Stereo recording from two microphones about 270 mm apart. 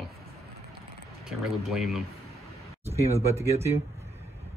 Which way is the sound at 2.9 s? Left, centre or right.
Right.